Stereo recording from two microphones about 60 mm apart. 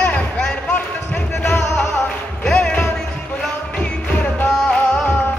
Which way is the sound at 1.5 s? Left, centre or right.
Left.